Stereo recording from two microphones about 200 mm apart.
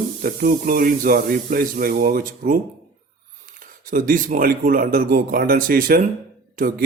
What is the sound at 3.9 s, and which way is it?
Speech, 45° right (ahead or behind).